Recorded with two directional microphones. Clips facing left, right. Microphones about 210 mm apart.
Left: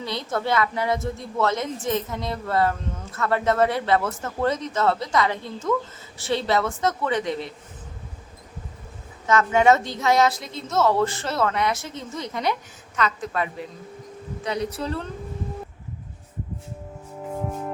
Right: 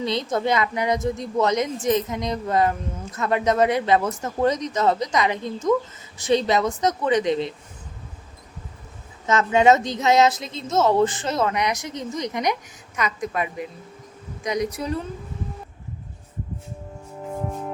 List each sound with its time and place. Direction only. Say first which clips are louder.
0.0 s a woman's voice: right 4 dB; 20° right (ahead or behind)
9.2 s a woman's voice: right 1 dB; 20° right (ahead or behind)
17.2 s music: even; centre (ahead or behind)